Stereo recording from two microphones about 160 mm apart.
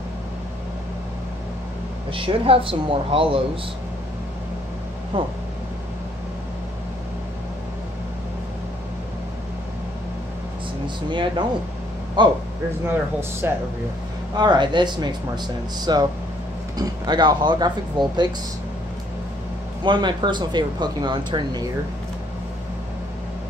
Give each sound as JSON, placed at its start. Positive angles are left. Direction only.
{"t": 2.1, "sound": "speech", "side_deg": -35}
{"t": 5.1, "sound": "speech", "side_deg": -35}
{"t": 11.1, "sound": "speech", "side_deg": -30}
{"t": 12.8, "sound": "speech", "side_deg": -15}
{"t": 14.3, "sound": "speech", "side_deg": -25}
{"t": 19.8, "sound": "speech", "side_deg": -30}